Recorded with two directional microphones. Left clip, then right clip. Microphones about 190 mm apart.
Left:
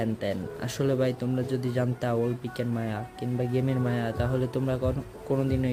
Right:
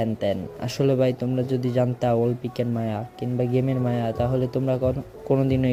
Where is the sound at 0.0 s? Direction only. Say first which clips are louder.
Right 5 dB; 20° right (ahead or behind).